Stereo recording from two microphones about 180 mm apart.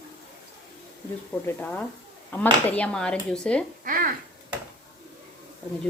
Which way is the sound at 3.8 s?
50° right (ahead or behind).